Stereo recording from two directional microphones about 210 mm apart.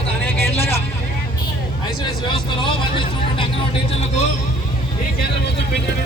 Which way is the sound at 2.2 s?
25° left (ahead or behind).